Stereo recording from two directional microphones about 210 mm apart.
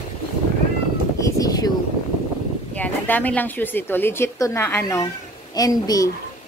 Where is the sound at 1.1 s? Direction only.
15° left (ahead or behind).